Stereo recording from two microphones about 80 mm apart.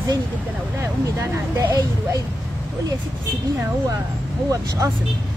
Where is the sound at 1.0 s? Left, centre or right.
Right.